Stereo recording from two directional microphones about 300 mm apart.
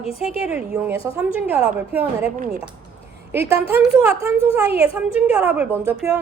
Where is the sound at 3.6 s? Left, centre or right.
Centre.